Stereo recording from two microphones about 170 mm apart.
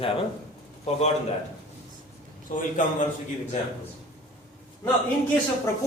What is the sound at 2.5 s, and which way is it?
Speech, 50° left (ahead or behind).